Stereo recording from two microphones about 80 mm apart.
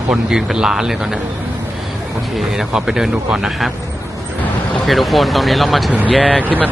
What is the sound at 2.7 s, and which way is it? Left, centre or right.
Speech, centre.